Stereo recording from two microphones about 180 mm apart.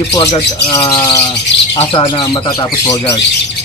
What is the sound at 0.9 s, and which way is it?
Speech, 25° left (ahead or behind).